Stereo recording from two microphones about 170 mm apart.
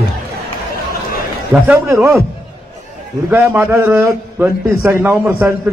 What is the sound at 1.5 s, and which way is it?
Speech, 15° right (ahead or behind).